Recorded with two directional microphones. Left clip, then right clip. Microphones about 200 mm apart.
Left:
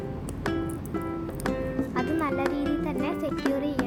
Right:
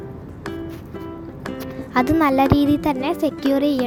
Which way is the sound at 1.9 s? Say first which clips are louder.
Right 13 dB; 40° right (ahead or behind).